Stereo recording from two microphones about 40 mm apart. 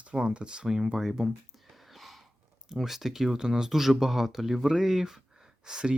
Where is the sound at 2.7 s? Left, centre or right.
Centre.